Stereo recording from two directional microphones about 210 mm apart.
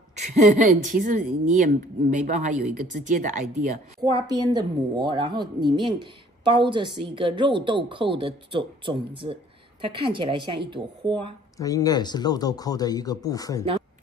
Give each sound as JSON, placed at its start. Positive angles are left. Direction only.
{"t": 0.1, "sound": "speech", "side_deg": -35}
{"t": 4.6, "sound": "speech", "side_deg": -20}
{"t": 11.5, "sound": "speech", "side_deg": 15}